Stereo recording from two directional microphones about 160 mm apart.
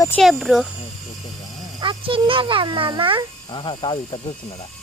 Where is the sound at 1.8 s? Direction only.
30° right (ahead or behind).